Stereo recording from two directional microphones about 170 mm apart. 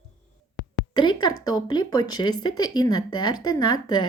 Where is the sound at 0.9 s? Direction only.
25° left (ahead or behind).